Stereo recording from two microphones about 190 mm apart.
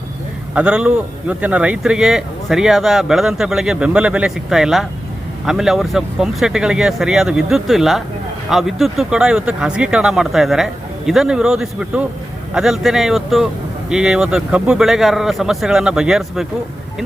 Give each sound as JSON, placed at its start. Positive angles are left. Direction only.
{"t": 0.5, "sound": "a man's voice", "side_deg": -5}